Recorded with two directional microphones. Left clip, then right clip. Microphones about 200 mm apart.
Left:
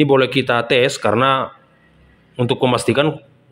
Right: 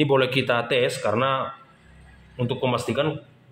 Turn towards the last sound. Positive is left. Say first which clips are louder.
# left 8 dB
turn(degrees=45)  # may be behind; listen again after turning